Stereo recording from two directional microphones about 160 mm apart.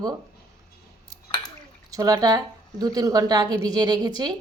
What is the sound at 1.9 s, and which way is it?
A woman's voice, 25° right (ahead or behind).